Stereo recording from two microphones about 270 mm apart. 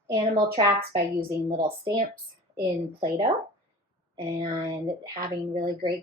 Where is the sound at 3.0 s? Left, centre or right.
Centre.